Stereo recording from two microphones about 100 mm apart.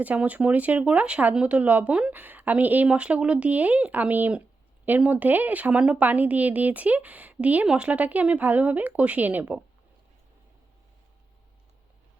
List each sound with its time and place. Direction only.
0.0 s speech: 15° right (ahead or behind)